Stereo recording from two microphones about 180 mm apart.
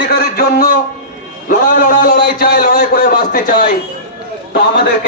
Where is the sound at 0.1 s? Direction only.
55° left (ahead or behind).